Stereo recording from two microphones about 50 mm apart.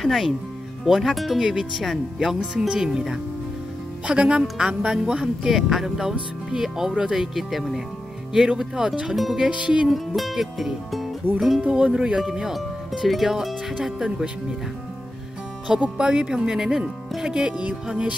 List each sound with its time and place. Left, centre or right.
0.0 s speech: centre
9.5 s speech: right
9.8 s speech: centre
11.7 s speech: centre
12.2 s speech: centre
15.8 s speech: centre